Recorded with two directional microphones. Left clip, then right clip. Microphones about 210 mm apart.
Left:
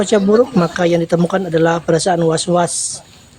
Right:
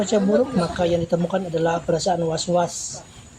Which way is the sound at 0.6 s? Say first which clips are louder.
Left 6 dB; 50° left (ahead or behind).